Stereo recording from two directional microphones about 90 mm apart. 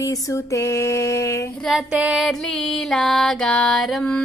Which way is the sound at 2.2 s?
5° left (ahead or behind).